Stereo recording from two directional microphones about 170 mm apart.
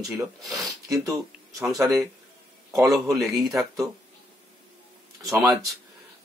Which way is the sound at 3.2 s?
Centre (ahead or behind).